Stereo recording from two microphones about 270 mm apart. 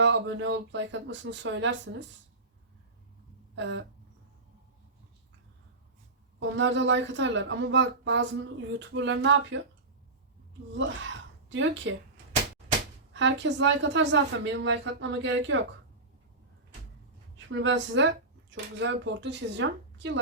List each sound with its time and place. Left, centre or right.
0.0 s a woman's voice: right
3.5 s a sound: right
6.6 s a woman's voice: right
11.4 s a woman's voice: right
13.1 s a woman's voice: right
17.3 s a woman's voice: right